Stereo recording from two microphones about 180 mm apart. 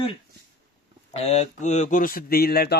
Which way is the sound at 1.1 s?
35° left (ahead or behind).